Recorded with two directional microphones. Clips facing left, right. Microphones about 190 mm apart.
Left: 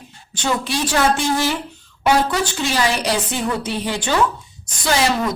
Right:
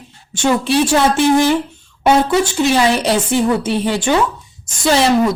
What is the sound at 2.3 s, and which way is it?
Speech, 25° right (ahead or behind).